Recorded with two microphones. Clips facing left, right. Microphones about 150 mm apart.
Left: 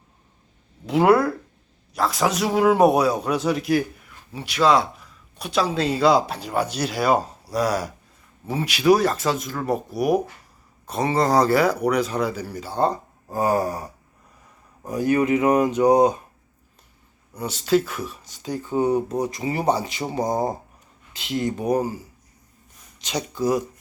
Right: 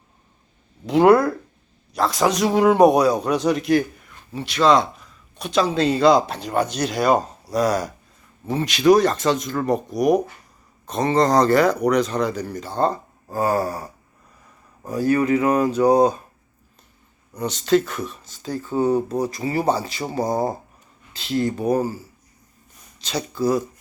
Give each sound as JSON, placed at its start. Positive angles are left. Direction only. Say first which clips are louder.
{"t": 0.9, "sound": "a man's voice", "louder": "right 3 dB", "side_deg": 5}
{"t": 17.3, "sound": "a man's voice", "louder": "right 2 dB", "side_deg": 10}